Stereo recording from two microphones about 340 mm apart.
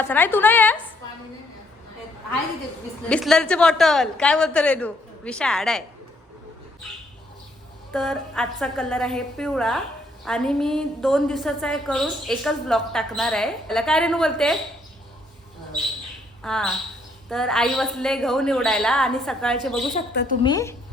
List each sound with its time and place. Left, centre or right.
0.0 s a woman's voice: centre
3.1 s a woman's voice: centre
7.9 s a woman's voice: centre
16.4 s a woman's voice: centre
19.9 s speech: left
20.4 s a woman's voice: centre